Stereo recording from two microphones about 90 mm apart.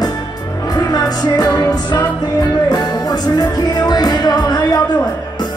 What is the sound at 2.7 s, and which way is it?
Music, 50° left (ahead or behind).